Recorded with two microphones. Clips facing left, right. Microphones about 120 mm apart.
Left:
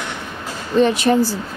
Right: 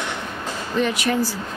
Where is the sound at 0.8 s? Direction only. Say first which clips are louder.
Left 7 dB; 30° left (ahead or behind).